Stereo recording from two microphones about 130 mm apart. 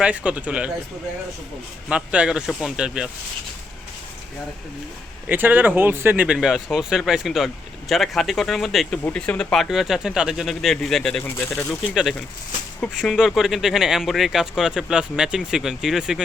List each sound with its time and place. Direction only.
0.0 s speech: 10° right (ahead or behind)
1.9 s speech: 10° right (ahead or behind)
5.3 s speech: 15° right (ahead or behind); by 11.2 s centre (ahead or behind)
11.2 s speech: 15° left (ahead or behind)
11.7 s speech: 5° right (ahead or behind)